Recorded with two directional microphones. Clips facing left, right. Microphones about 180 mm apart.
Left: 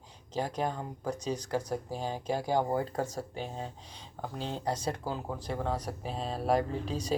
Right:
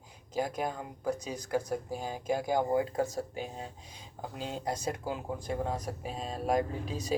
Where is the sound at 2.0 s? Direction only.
35° left (ahead or behind).